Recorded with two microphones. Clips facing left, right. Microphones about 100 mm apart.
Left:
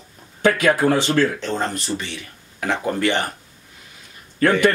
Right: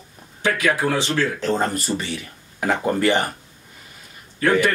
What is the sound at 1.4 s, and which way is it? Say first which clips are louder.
Speech: right 3 dB; 5° right (ahead or behind).